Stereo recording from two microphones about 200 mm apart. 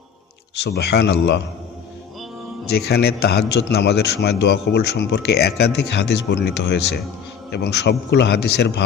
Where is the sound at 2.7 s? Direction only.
55° left (ahead or behind).